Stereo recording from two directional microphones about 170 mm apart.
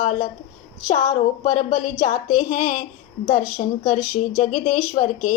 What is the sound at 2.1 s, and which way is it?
Speech, 55° left (ahead or behind).